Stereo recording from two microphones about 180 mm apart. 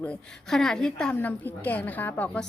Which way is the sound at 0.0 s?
5° left (ahead or behind).